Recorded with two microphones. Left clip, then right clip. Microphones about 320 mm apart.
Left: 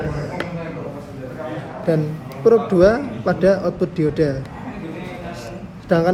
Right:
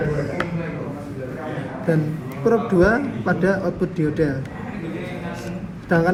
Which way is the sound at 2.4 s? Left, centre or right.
Left.